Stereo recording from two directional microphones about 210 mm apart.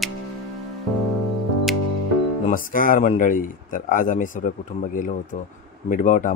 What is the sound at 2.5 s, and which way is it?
A man's voice, 40° left (ahead or behind).